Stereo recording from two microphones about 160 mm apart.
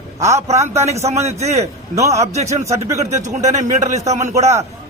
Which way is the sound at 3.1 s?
45° right (ahead or behind).